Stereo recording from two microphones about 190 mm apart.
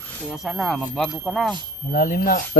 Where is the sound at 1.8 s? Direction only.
50° left (ahead or behind).